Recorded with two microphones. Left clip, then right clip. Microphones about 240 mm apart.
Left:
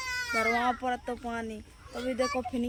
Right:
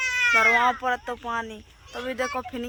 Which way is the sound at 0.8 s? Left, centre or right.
Centre.